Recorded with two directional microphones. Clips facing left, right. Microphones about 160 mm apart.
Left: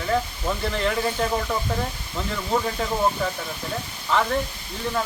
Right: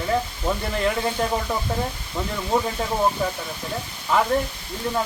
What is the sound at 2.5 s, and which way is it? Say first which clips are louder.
Speech: right 2 dB; 15° right (ahead or behind).